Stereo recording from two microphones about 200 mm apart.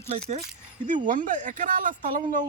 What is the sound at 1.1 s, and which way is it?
Speech, 40° right (ahead or behind).